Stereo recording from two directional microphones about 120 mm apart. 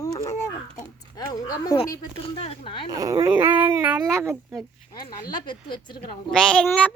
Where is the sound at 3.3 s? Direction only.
15° right (ahead or behind).